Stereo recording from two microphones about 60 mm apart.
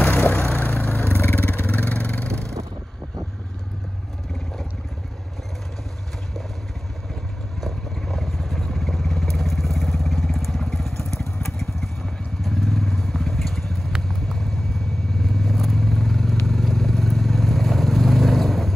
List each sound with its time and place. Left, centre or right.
0.0 s vehicle: left
2.2 s vehicle: centre
7.6 s vehicle: centre